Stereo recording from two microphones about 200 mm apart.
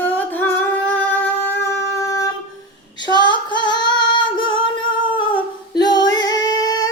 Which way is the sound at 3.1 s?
20° left (ahead or behind).